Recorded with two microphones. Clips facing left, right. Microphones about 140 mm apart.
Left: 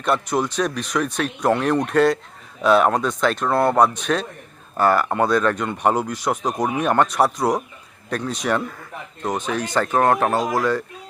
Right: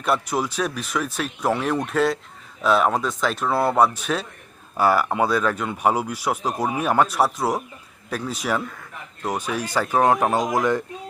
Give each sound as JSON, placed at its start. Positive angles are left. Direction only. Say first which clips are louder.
{"t": 0.0, "sound": "speech", "louder": "left 2 dB", "side_deg": -5}